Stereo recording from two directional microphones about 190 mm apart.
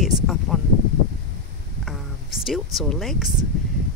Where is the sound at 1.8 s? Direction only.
Centre (ahead or behind).